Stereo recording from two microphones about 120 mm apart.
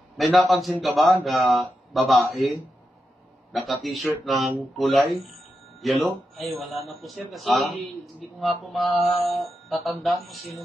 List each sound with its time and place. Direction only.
0.2 s a man's voice: centre (ahead or behind)
3.5 s a man's voice: centre (ahead or behind)